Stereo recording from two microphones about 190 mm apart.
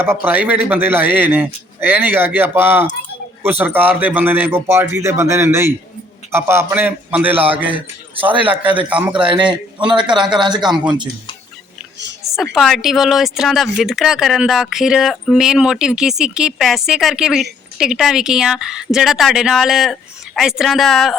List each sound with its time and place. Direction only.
0.0 s a man's voice: 10° right (ahead or behind)
8.9 s a man's voice: 5° right (ahead or behind)
9.1 s a man's voice: 25° right (ahead or behind)
12.2 s a sound: centre (ahead or behind)
12.5 s speech: centre (ahead or behind)